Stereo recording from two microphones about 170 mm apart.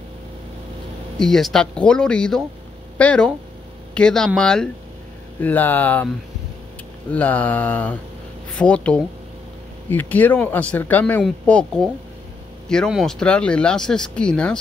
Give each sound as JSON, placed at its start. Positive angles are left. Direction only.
{"t": 1.2, "sound": "speech", "side_deg": 5}
{"t": 7.1, "sound": "speech", "side_deg": 10}
{"t": 12.6, "sound": "speech", "side_deg": 5}